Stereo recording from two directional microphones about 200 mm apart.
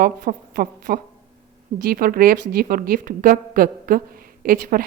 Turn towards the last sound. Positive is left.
turn(degrees=-45)  # may be behind; listen again after turning